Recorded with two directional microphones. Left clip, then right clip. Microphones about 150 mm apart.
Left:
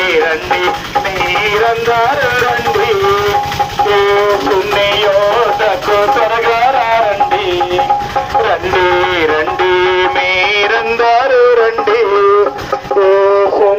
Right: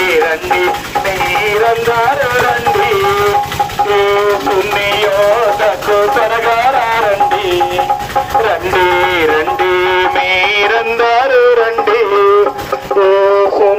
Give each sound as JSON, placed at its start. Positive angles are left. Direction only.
{"t": 0.2, "sound": "speech", "side_deg": -15}
{"t": 1.6, "sound": "music", "side_deg": -10}
{"t": 3.8, "sound": "music", "side_deg": -15}
{"t": 5.6, "sound": "music", "side_deg": -10}
{"t": 8.4, "sound": "music", "side_deg": -20}
{"t": 13.0, "sound": "a sound", "side_deg": -50}